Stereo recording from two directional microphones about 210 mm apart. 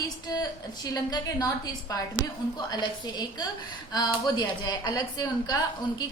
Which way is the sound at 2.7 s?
20° left (ahead or behind).